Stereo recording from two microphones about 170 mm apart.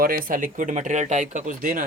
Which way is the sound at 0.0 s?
60° right (ahead or behind).